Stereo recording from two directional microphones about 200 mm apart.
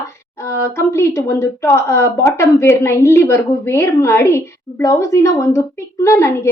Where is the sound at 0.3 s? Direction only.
15° left (ahead or behind).